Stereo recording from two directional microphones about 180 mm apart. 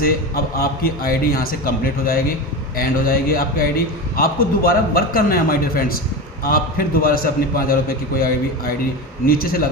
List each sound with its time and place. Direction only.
0.0 s a man's voice: 55° left (ahead or behind)